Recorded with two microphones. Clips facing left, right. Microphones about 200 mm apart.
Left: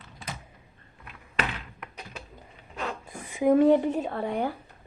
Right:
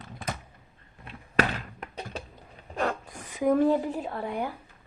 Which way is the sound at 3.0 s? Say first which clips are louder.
Left 6 dB; 5° left (ahead or behind).